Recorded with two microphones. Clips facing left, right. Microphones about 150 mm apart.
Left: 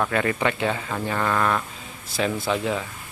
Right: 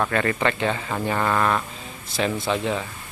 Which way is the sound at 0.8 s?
15° right (ahead or behind).